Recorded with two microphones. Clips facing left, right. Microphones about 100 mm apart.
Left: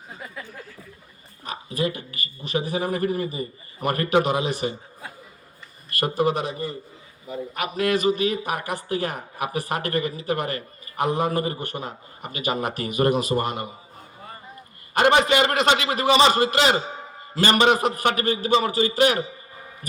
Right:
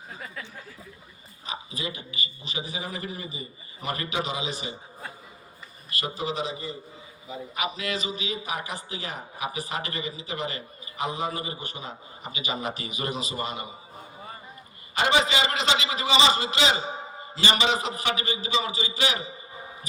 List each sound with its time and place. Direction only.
0.1 s a sound: 5° left (ahead or behind)
1.5 s a man's voice: 55° left (ahead or behind)
6.0 s a man's voice: 55° left (ahead or behind)
14.9 s a man's voice: 55° left (ahead or behind)